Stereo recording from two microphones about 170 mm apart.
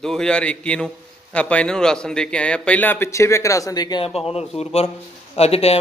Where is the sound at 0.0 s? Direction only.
5° left (ahead or behind).